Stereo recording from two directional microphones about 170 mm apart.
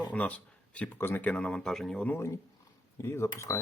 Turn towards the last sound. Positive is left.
turn(degrees=15)  # may be behind; listen again after turning